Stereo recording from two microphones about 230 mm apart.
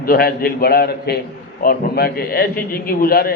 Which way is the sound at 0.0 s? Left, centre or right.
Left.